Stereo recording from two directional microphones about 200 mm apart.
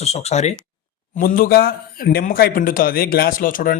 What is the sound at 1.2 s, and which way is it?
Speech, 45° left (ahead or behind).